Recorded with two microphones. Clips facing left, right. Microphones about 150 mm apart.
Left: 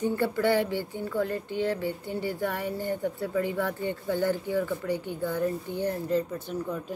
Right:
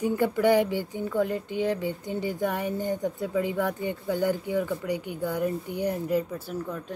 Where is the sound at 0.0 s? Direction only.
15° right (ahead or behind).